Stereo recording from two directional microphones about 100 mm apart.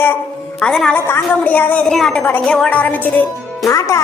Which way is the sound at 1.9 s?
5° left (ahead or behind).